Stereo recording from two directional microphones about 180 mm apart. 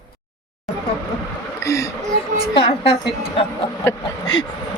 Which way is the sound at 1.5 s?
15° left (ahead or behind).